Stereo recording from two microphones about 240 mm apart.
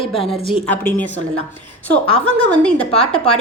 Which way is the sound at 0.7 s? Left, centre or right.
Centre.